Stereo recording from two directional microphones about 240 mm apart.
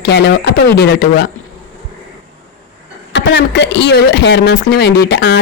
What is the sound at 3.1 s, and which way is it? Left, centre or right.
Speech, left.